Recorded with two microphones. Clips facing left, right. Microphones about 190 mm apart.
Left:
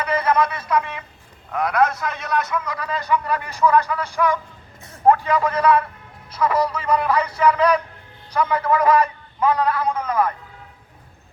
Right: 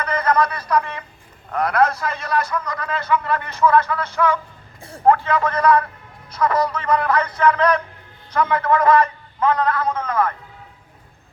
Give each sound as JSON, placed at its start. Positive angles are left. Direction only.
{"t": 0.0, "sound": "a sound", "side_deg": 10}
{"t": 0.7, "sound": "a man's voice", "side_deg": 5}
{"t": 4.8, "sound": "vehicle", "side_deg": -30}
{"t": 5.0, "sound": "a man's voice", "side_deg": 15}